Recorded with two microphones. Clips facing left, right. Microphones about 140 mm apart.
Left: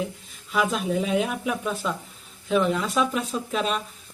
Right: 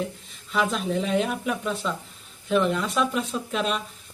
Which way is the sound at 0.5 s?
5° left (ahead or behind).